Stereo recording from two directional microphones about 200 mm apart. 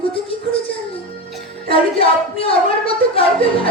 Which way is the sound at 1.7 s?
30° left (ahead or behind).